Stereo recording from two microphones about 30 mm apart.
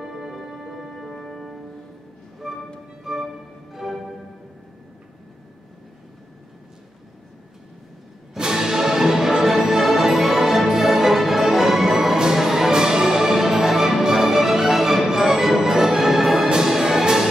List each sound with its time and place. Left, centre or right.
0.0 s music: centre
2.4 s music: centre
8.4 s music: centre
16.4 s orchestra: centre